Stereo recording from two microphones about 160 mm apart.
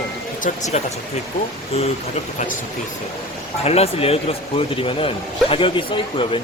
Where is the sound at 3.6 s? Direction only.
40° left (ahead or behind).